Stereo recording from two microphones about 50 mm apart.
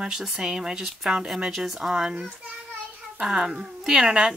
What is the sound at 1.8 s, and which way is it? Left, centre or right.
Speech, centre.